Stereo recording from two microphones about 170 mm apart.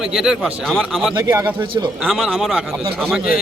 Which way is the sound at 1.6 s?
30° right (ahead or behind).